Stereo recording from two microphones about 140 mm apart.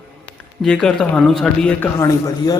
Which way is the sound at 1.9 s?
25° left (ahead or behind).